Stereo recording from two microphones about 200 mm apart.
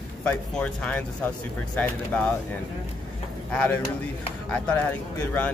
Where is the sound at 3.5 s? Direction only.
5° left (ahead or behind).